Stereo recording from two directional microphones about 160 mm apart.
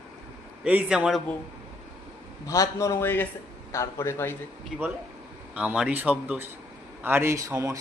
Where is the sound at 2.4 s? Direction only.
20° left (ahead or behind).